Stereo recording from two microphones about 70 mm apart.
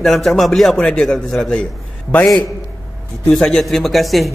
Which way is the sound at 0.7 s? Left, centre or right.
Centre.